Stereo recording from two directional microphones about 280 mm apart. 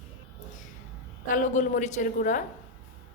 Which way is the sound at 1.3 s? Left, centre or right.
Left.